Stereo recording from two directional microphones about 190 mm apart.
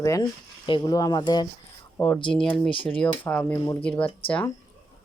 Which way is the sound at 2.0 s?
5° left (ahead or behind).